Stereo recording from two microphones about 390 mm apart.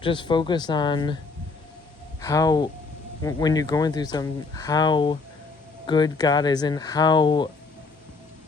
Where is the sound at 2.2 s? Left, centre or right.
Centre.